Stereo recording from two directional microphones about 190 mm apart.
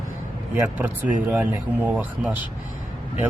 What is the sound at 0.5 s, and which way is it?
Speech, 10° right (ahead or behind).